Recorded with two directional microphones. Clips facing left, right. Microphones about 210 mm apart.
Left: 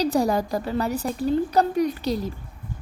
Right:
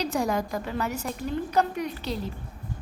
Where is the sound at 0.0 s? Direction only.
35° left (ahead or behind).